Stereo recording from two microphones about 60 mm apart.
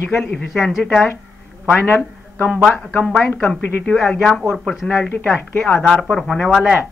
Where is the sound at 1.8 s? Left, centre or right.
Left.